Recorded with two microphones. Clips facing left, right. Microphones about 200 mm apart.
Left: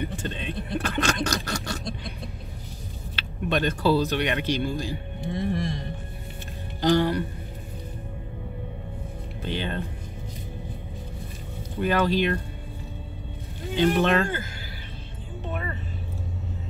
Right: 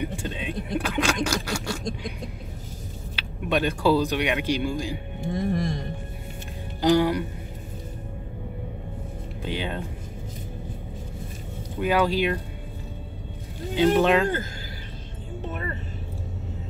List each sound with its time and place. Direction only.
0.0 s a sound: 10° right (ahead or behind)
3.2 s speech: 10° right (ahead or behind)
5.2 s speech: 45° right (ahead or behind)
6.8 s speech: 10° right (ahead or behind)
9.4 s speech: 10° right (ahead or behind)
11.8 s speech: 10° right (ahead or behind)
13.7 s speech: 10° right (ahead or behind)